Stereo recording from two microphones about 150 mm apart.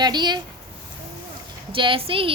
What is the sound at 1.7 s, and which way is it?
Speech, 35° right (ahead or behind).